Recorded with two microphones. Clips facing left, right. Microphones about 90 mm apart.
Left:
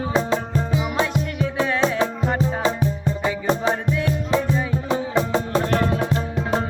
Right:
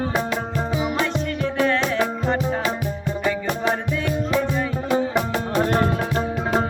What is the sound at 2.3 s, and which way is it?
Music, 30° left (ahead or behind).